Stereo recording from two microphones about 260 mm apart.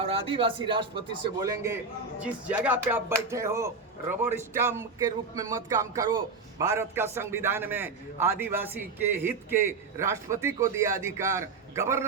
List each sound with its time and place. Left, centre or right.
0.0 s speech: right
2.2 s music: centre
3.2 s a man's voice: centre